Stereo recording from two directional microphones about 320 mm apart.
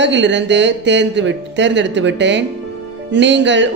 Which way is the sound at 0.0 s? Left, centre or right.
Right.